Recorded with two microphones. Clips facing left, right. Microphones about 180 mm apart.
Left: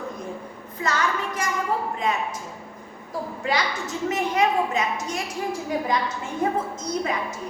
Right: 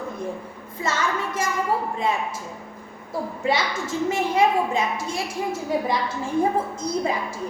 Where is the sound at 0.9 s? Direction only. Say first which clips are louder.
Even; 25° right (ahead or behind).